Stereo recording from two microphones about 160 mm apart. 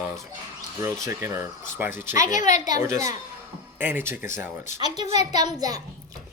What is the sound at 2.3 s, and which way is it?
Speech, 50° left (ahead or behind).